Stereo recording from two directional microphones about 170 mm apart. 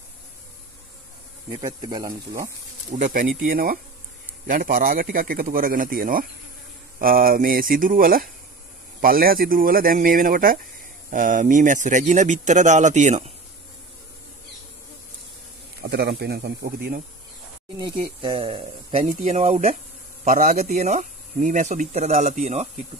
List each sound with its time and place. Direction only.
1.6 s speech: 25° right (ahead or behind)
2.9 s speech: 50° right (ahead or behind)
15.8 s speech: 80° right; by 17.0 s 65° right (ahead or behind)
17.7 s speech: 30° right (ahead or behind)